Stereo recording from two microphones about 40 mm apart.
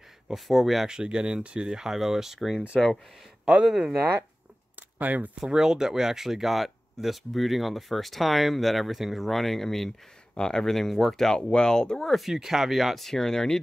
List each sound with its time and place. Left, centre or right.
0.5 s speech: centre
0.8 s speech: right; by 2.6 s centre
3.6 s speech: centre
4.7 s speech: right
5.4 s speech: centre
11.3 s speech: left
12.3 s speech: centre